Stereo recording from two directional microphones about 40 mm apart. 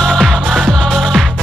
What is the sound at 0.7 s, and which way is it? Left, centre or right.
Music, centre.